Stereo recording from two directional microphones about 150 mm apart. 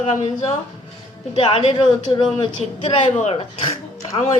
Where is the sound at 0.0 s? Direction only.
50° left (ahead or behind).